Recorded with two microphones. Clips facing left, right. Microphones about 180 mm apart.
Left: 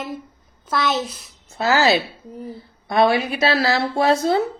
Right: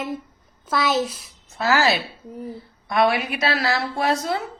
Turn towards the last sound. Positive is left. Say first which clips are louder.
# left 5 dB
turn(degrees=30)  # may be behind; listen again after turning